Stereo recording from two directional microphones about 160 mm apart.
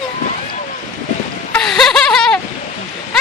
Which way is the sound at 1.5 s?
5° left (ahead or behind).